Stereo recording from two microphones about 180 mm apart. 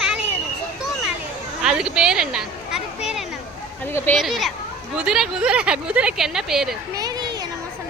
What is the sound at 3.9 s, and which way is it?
Speech, 10° left (ahead or behind).